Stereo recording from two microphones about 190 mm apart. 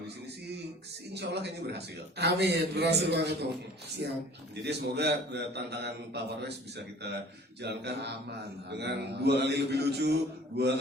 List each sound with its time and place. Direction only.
1.1 s a man's voice: 60° right (ahead or behind)
4.6 s a man's voice: 60° right (ahead or behind)